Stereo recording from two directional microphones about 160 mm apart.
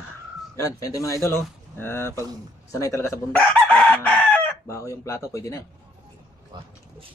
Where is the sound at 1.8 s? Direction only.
15° left (ahead or behind).